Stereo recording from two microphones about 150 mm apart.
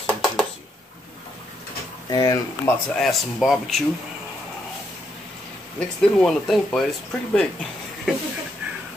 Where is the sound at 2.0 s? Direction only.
25° left (ahead or behind).